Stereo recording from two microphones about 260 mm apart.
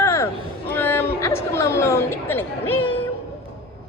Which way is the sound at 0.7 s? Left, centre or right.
Centre.